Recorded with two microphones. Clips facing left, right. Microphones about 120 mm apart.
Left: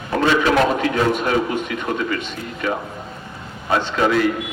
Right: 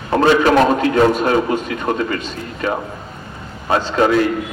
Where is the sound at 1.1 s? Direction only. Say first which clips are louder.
Right 4 dB; 35° right (ahead or behind).